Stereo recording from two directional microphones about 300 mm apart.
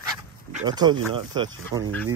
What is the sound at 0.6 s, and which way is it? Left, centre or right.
Speech, centre.